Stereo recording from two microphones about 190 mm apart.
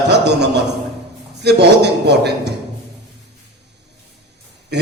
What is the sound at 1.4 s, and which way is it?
A man's voice, 60° right (ahead or behind).